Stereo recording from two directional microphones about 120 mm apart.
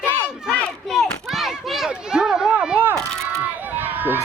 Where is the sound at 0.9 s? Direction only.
Centre (ahead or behind).